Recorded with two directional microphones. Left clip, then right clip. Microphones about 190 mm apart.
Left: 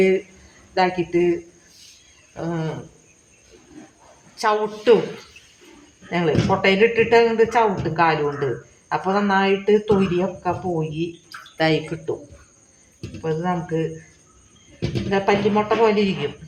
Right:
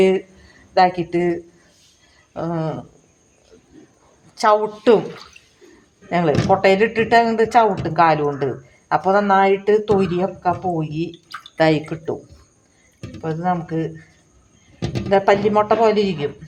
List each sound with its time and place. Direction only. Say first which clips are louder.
0.7 s speech: right 4 dB; 65° right (ahead or behind)
4.4 s speech: right 5 dB; 60° right (ahead or behind)
6.1 s speech: right 4 dB; 60° right (ahead or behind)
13.2 s speech: right 2 dB; 55° right (ahead or behind)
15.1 s speech: right 4 dB; 60° right (ahead or behind)